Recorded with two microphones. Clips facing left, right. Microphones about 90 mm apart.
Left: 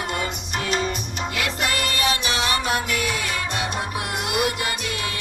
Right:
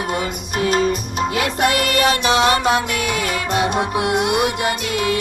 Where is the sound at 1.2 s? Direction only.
40° right (ahead or behind).